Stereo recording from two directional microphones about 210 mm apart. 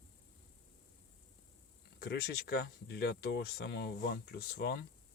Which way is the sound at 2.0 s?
50° left (ahead or behind).